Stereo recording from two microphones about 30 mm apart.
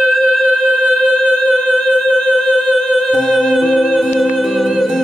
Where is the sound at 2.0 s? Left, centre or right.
Centre.